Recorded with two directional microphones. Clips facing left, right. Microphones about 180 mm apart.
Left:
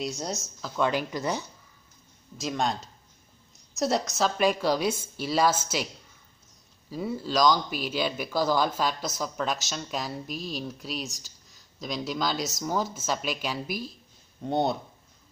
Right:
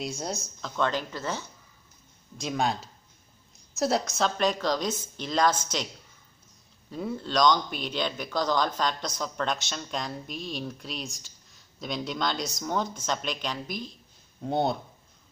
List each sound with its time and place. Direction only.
0.0 s speech: centre (ahead or behind)
2.3 s a woman's voice: centre (ahead or behind)
6.9 s speech: 5° left (ahead or behind)